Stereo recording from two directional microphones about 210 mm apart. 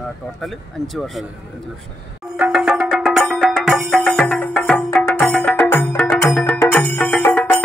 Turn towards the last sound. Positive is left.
turn(degrees=10)  # may be behind; listen again after turning